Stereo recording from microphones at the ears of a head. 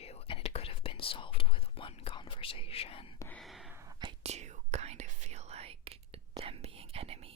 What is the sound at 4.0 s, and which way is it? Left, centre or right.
Whispering, right.